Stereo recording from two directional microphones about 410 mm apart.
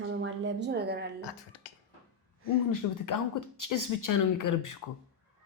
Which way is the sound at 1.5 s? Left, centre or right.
Left.